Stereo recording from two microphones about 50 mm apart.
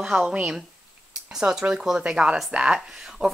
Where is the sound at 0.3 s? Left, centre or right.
Right.